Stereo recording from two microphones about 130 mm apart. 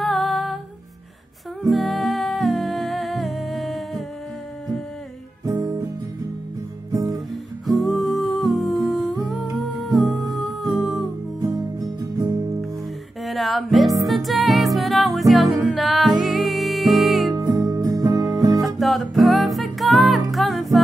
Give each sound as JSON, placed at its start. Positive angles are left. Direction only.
{"t": 0.0, "sound": "music", "side_deg": 0}
{"t": 1.6, "sound": "humming", "side_deg": 0}
{"t": 5.4, "sound": "music", "side_deg": -25}
{"t": 6.9, "sound": "guitar", "side_deg": -30}
{"t": 7.8, "sound": "humming", "side_deg": 0}
{"t": 9.8, "sound": "music", "side_deg": 0}
{"t": 11.4, "sound": "music", "side_deg": -30}
{"t": 13.2, "sound": "music", "side_deg": 0}
{"t": 17.3, "sound": "music", "side_deg": -30}
{"t": 18.8, "sound": "music", "side_deg": 0}